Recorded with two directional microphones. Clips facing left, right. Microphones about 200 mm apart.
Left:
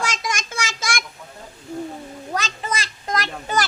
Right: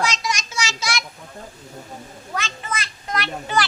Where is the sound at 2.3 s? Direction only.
40° left (ahead or behind).